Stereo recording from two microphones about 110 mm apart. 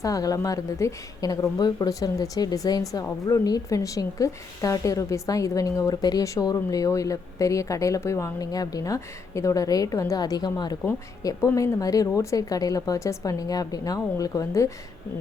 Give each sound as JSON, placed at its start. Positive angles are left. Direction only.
{"t": 0.0, "sound": "a woman's voice", "side_deg": 30}